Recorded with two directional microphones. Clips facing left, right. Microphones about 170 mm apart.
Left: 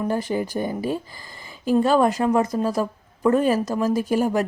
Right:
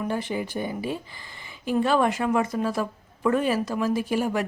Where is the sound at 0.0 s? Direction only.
40° left (ahead or behind).